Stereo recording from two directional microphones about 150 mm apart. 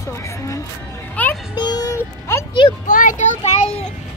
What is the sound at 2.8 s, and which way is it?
A child's voice, 60° left (ahead or behind).